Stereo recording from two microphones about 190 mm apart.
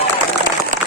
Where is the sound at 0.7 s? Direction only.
45° right (ahead or behind).